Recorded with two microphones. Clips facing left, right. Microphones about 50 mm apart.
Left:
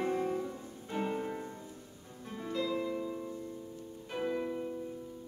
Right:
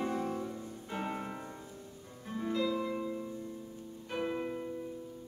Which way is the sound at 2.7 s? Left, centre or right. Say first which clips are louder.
Even; right.